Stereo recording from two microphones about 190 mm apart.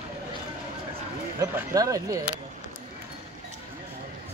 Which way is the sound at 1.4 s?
20° right (ahead or behind).